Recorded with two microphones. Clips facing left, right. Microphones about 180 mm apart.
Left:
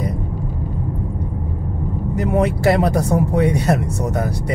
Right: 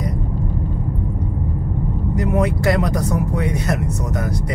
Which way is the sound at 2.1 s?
30° left (ahead or behind).